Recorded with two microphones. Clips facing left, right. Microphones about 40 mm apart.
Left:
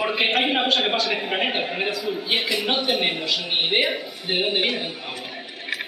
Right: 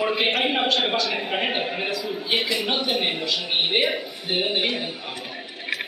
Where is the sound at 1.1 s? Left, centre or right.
Centre.